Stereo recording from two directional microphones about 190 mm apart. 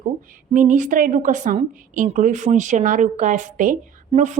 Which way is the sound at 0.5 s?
40° right (ahead or behind).